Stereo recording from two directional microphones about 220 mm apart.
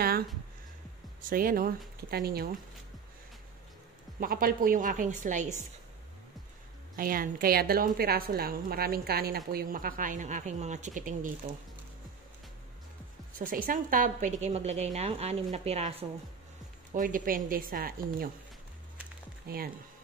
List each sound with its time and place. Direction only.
1.3 s a woman's voice: 40° right (ahead or behind)
4.2 s speech: 40° right (ahead or behind)
7.0 s a woman's voice: 40° right (ahead or behind)
13.4 s a woman's voice: 40° right (ahead or behind)
19.4 s speech: 45° right (ahead or behind)